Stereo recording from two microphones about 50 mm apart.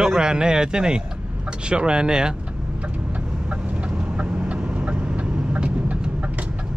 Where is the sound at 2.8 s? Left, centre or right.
Right.